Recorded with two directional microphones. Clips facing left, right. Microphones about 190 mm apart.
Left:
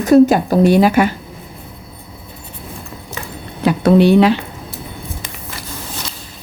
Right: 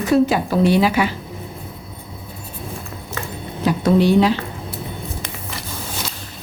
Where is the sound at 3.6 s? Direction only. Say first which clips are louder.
Left 5 dB; 65° left (ahead or behind).